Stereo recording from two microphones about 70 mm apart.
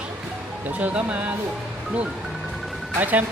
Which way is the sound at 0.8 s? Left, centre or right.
Right.